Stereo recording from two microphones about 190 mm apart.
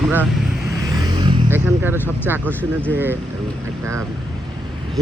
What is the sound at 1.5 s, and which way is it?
Speech, 10° right (ahead or behind).